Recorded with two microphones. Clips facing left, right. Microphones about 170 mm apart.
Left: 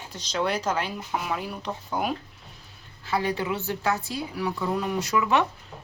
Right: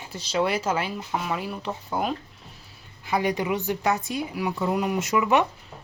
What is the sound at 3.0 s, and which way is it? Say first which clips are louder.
A woman's voice: right 2 dB; 15° right (ahead or behind).